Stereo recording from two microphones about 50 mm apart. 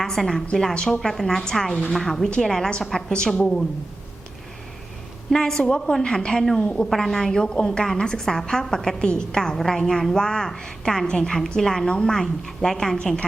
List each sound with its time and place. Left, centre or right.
0.0 s a woman's voice: centre
5.3 s a woman's voice: centre
6.9 s a woman's voice: centre